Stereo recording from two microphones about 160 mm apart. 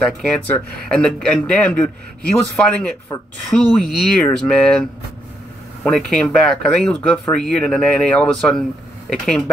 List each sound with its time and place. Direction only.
0.0 s speech: 5° left (ahead or behind)
3.1 s a woman's voice: 25° left (ahead or behind)
3.5 s speech: 5° left (ahead or behind)
5.9 s speech: 5° left (ahead or behind)